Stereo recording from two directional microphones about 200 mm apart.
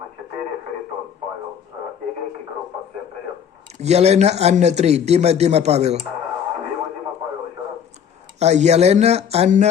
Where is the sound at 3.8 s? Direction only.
35° right (ahead or behind).